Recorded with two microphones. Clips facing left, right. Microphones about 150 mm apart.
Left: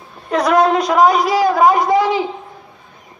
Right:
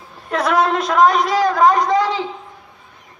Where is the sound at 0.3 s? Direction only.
Centre (ahead or behind).